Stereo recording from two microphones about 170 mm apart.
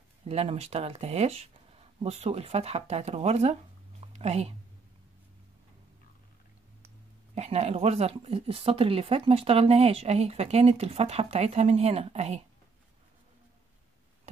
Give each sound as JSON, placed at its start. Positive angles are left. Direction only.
{"t": 0.3, "sound": "speech", "side_deg": -35}
{"t": 7.3, "sound": "speech", "side_deg": -40}